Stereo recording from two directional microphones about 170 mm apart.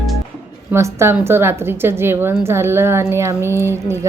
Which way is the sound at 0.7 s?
15° right (ahead or behind).